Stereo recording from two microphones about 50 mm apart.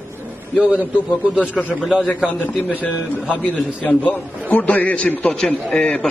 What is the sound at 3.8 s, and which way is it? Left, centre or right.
A man's voice, left.